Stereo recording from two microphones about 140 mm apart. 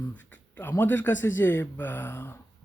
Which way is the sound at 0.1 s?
10° left (ahead or behind).